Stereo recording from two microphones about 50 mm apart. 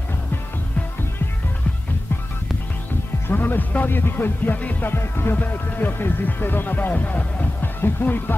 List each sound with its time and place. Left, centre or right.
3.3 s speech: left
4.9 s speech: left